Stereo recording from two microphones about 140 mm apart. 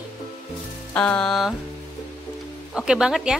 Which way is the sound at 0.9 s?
10° left (ahead or behind).